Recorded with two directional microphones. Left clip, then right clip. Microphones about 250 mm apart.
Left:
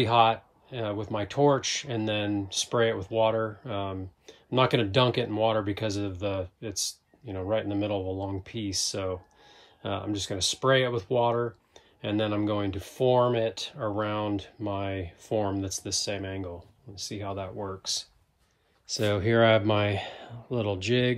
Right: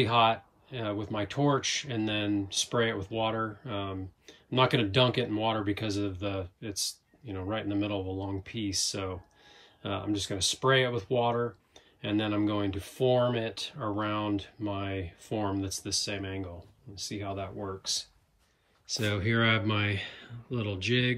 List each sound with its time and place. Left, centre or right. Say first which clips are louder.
0.0 s speech: left 3 dB; centre